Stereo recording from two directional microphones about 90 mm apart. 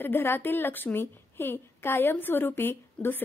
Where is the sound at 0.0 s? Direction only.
25° left (ahead or behind).